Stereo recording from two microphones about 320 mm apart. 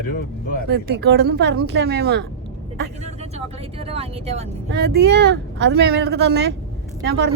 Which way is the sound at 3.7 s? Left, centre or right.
Centre.